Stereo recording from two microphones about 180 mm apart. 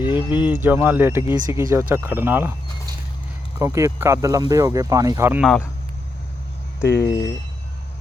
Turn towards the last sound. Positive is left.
turn(degrees=70)  # may be behind; listen again after turning